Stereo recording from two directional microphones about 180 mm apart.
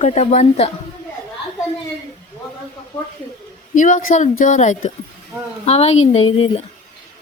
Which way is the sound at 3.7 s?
45° left (ahead or behind).